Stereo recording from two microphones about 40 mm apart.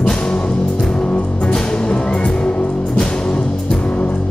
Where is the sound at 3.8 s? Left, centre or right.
Left.